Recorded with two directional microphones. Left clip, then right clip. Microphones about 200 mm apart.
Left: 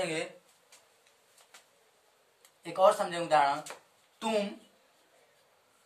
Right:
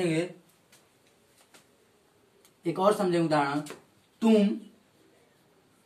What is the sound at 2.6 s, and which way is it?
A man's voice, 20° left (ahead or behind).